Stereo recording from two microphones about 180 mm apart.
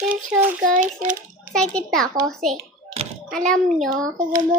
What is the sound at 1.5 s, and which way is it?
A child's voice, 5° left (ahead or behind).